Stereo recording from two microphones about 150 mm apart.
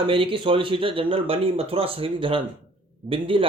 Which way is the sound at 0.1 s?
35° right (ahead or behind).